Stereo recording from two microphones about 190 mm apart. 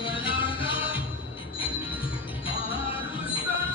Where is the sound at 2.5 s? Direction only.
25° left (ahead or behind).